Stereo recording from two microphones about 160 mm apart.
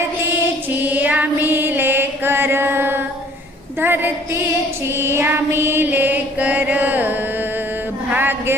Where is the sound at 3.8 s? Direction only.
15° right (ahead or behind).